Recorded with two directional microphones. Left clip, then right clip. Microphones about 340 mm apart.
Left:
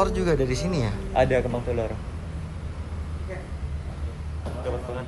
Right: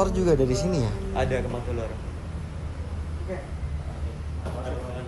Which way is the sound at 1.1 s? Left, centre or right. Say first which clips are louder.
Left 6 dB; centre.